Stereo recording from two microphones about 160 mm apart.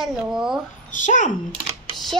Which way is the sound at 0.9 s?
50° left (ahead or behind).